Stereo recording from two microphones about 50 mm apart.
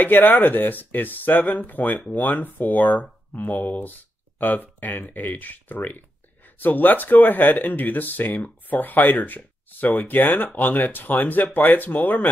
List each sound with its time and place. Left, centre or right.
0.0 s speech: left